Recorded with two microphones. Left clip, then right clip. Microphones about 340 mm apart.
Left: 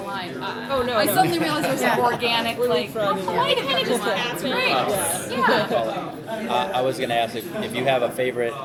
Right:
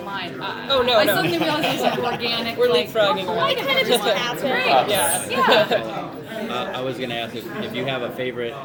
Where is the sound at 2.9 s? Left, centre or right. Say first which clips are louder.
Right 3 dB; right.